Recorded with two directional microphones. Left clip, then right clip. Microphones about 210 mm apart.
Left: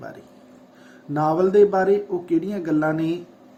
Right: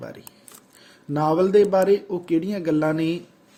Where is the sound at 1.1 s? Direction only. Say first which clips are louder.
Even; 35° right (ahead or behind).